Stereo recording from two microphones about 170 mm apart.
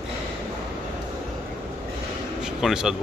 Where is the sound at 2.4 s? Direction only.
5° right (ahead or behind).